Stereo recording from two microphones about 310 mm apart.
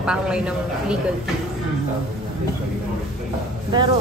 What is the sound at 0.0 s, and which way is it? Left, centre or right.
Speech, centre.